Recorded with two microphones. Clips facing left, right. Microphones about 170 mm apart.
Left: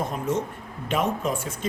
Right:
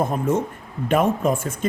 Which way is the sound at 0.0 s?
55° right (ahead or behind).